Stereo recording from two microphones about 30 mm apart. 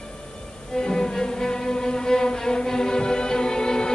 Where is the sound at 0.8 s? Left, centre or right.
Left.